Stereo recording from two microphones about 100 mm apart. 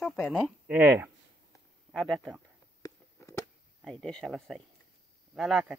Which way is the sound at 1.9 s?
5° left (ahead or behind).